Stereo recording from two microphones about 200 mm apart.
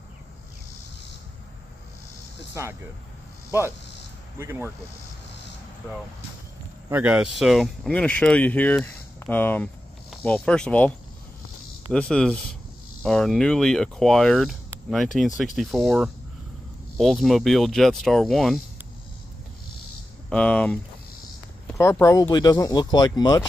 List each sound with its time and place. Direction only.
2.6 s speech: 15° right (ahead or behind)
4.4 s speech: 10° right (ahead or behind)
6.9 s speech: 5° right (ahead or behind)
11.9 s speech: 5° left (ahead or behind)
20.2 s speech: 5° left (ahead or behind)